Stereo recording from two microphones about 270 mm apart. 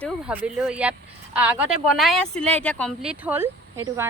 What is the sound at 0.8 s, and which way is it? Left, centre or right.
Speech, centre.